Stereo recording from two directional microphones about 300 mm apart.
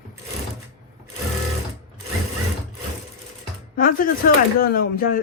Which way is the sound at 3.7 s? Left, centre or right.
Left.